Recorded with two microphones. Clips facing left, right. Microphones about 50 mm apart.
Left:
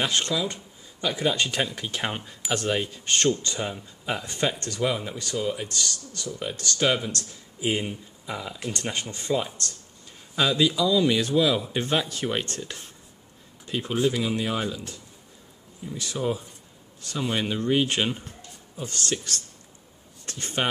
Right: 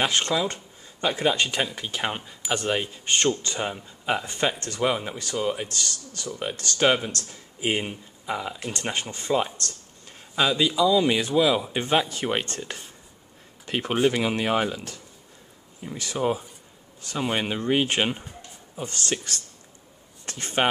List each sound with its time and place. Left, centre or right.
0.0 s speech: right
1.3 s speech: centre
10.3 s speech: centre
13.7 s speech: right
19.0 s speech: right